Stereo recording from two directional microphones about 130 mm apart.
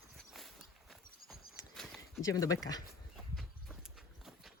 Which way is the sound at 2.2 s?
25° left (ahead or behind).